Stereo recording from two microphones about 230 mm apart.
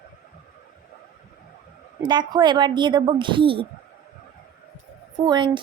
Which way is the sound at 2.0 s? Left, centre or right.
Centre.